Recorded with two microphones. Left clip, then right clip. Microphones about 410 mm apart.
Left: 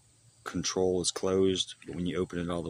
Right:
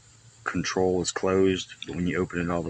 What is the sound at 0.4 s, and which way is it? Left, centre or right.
Speech, left.